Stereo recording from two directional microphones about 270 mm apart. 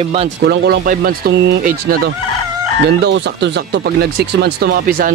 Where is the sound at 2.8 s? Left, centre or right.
Right.